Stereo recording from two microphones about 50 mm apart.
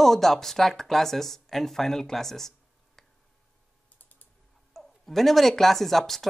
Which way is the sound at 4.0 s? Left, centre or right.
Left.